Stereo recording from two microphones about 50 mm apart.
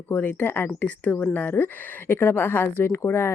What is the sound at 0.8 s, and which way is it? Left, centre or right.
Speech, left.